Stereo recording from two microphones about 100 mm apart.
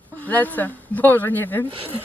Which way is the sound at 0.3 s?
15° left (ahead or behind).